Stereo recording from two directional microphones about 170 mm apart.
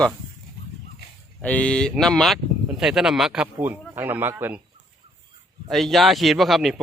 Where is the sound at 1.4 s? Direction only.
10° left (ahead or behind); by 4.6 s 10° right (ahead or behind).